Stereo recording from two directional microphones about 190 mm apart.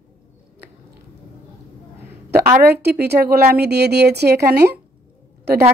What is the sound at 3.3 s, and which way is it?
A woman's voice, 55° right (ahead or behind).